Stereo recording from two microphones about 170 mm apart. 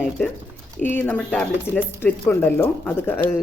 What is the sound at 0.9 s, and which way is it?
Speech, 10° left (ahead or behind).